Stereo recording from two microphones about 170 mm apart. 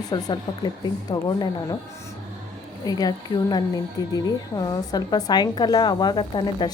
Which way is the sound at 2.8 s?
20° left (ahead or behind).